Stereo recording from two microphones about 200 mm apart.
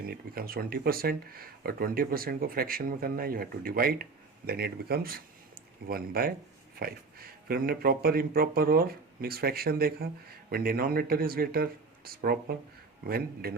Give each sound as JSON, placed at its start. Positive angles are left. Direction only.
{"t": 0.0, "sound": "speech", "side_deg": -50}